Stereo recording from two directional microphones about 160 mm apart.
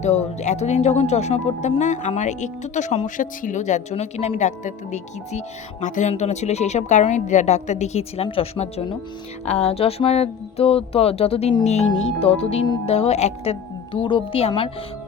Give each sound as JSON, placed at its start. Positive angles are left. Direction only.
{"t": 0.0, "sound": "speech", "side_deg": 45}